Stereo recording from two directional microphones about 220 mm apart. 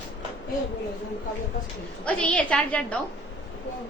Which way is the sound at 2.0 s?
5° left (ahead or behind).